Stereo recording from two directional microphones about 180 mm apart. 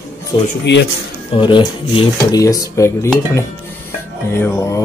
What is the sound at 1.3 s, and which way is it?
Speech, 30° left (ahead or behind).